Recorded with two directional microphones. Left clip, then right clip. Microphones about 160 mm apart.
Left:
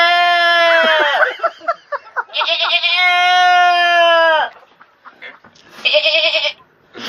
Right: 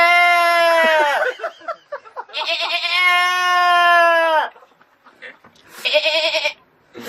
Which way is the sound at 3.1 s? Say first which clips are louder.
Left 5 dB; 15° right (ahead or behind).